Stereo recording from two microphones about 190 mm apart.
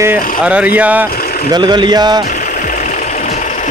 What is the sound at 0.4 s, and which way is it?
Speech, 5° right (ahead or behind).